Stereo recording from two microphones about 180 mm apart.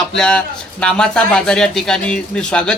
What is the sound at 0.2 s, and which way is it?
A man's voice, 5° left (ahead or behind).